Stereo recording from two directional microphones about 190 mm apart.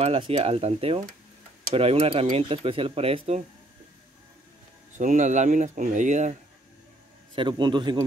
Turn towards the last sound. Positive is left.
turn(degrees=-25)  # may be behind; listen again after turning